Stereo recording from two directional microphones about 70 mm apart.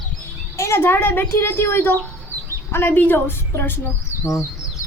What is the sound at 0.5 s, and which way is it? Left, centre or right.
A woman's voice, left.